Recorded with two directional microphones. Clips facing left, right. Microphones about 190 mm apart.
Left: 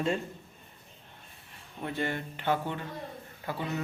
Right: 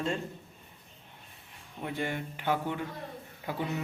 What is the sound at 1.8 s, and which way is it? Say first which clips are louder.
Speech: left 1 dB; 10° right (ahead or behind).